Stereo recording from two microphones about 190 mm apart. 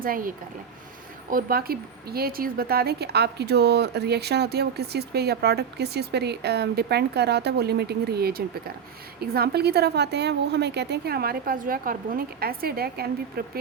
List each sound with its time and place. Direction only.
0.0 s a woman's voice: 45° right (ahead or behind)